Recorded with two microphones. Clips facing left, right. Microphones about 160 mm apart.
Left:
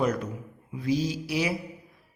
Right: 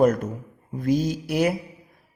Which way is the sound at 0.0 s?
50° right (ahead or behind).